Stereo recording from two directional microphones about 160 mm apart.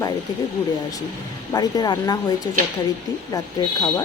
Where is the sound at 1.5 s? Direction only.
25° left (ahead or behind).